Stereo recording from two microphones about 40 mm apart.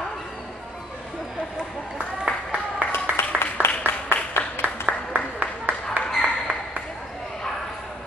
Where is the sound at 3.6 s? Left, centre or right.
Left.